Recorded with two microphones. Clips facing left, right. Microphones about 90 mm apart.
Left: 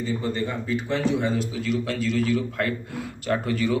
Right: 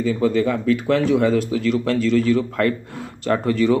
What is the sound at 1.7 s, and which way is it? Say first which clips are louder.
Speech: right 7 dB; 45° right (ahead or behind).